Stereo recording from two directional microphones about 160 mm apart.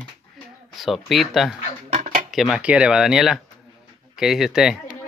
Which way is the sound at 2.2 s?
Centre (ahead or behind).